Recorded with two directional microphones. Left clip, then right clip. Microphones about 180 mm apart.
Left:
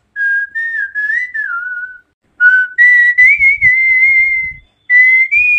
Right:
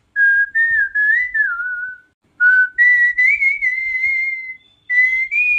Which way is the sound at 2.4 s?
15° left (ahead or behind).